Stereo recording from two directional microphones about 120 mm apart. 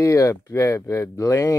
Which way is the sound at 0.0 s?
25° left (ahead or behind).